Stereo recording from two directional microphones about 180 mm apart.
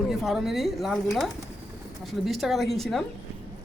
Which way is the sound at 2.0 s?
Centre (ahead or behind).